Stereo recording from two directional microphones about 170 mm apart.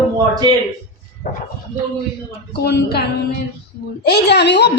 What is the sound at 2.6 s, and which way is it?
Speech, 75° left (ahead or behind).